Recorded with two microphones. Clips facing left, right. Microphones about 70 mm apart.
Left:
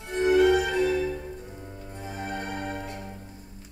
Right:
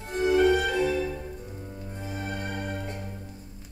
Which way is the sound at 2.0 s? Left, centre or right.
Left.